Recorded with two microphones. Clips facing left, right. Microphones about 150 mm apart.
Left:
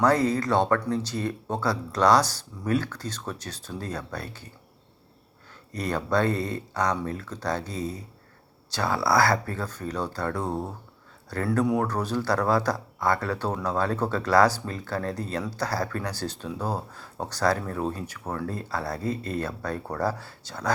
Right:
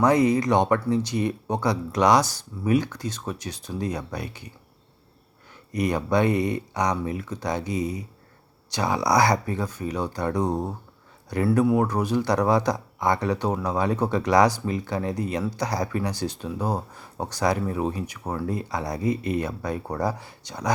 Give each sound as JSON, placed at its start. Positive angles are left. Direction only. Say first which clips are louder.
{"t": 0.0, "sound": "speech", "louder": "right 3 dB", "side_deg": -15}
{"t": 5.7, "sound": "speech", "louder": "right 3 dB", "side_deg": -15}